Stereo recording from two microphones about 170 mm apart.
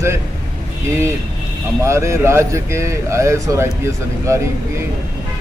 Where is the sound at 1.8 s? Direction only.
15° right (ahead or behind).